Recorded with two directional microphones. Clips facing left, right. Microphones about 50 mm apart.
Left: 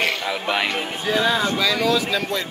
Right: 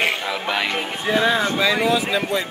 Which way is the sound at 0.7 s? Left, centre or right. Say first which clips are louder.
Right 1 dB; right.